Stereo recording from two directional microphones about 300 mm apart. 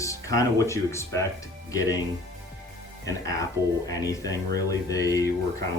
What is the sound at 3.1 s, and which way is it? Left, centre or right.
Speech, centre.